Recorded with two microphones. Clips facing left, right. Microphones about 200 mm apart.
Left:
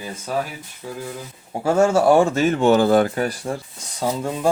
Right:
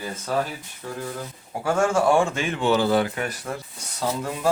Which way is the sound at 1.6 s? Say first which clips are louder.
Left 5 dB; 25° left (ahead or behind).